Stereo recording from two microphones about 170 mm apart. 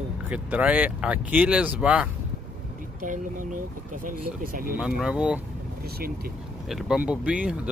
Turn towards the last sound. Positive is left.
turn(degrees=-5)  # may be behind; listen again after turning